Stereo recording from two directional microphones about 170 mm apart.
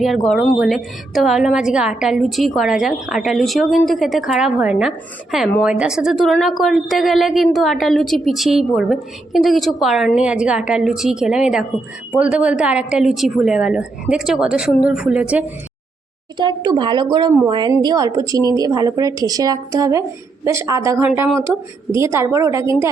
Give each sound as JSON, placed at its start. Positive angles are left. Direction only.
{"t": 0.3, "sound": "a woman's voice", "side_deg": 0}
{"t": 16.4, "sound": "a woman's voice", "side_deg": -25}